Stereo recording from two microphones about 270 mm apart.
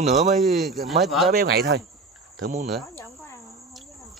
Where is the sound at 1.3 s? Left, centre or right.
Right.